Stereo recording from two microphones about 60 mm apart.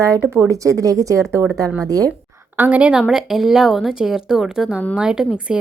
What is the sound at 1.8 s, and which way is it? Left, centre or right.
Speech, right.